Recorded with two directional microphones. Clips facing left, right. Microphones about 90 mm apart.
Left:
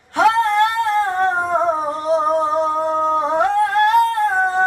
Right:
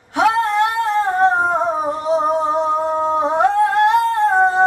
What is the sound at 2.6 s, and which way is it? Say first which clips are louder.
Humming: even; 15° right (ahead or behind).